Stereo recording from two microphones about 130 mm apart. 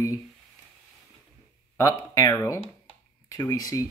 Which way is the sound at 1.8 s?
25° left (ahead or behind).